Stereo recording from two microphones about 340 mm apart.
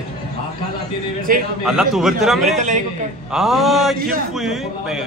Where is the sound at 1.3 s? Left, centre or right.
Right.